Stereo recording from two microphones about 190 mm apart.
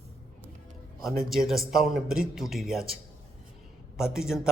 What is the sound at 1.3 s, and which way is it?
A man's voice, centre (ahead or behind).